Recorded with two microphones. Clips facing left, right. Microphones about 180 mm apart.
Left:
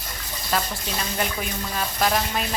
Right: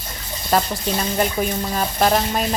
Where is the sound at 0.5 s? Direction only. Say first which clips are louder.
Right 7 dB; 40° right (ahead or behind).